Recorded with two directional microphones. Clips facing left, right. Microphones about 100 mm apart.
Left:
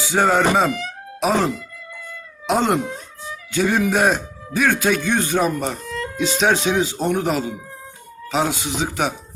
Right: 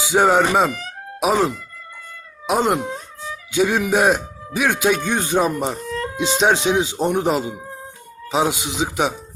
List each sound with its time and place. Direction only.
0.1 s speech: 15° right (ahead or behind)
2.5 s speech: 5° right (ahead or behind)
5.8 s music: 40° right (ahead or behind)
6.1 s speech: 20° right (ahead or behind)